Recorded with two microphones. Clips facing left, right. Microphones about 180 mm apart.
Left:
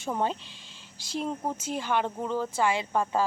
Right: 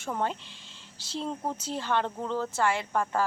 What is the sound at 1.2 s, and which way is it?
Speech, 10° left (ahead or behind).